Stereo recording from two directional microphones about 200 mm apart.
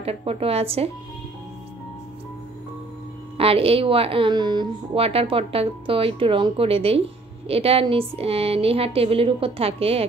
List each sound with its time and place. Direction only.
0.0 s speech: 30° right (ahead or behind)
3.3 s speech: 30° right (ahead or behind)